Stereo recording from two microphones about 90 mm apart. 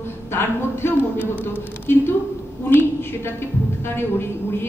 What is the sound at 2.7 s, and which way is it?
A woman's voice, 25° left (ahead or behind).